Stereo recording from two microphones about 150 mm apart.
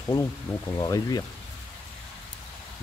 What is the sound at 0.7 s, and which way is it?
Speech, 25° left (ahead or behind).